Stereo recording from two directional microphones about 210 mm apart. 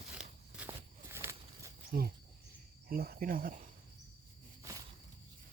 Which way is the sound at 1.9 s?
45° right (ahead or behind).